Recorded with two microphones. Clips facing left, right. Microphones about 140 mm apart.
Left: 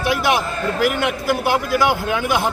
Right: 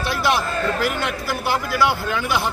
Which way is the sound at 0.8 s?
50° left (ahead or behind).